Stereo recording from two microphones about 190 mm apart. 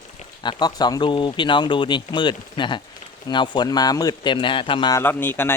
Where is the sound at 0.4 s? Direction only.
20° left (ahead or behind).